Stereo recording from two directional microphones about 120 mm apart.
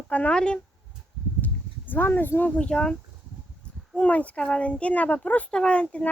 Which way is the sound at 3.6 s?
10° left (ahead or behind).